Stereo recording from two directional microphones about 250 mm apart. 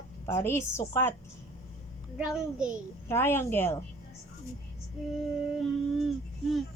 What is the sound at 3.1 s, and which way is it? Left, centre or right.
Speech, centre.